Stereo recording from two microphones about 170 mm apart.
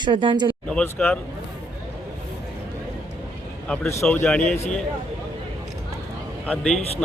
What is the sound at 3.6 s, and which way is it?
Speech, 5° left (ahead or behind).